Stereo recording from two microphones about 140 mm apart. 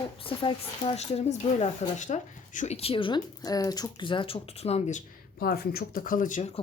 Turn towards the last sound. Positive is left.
turn(degrees=70)  # may be behind; listen again after turning